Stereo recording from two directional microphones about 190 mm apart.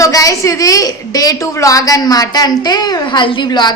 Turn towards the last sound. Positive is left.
turn(degrees=25)  # may be behind; listen again after turning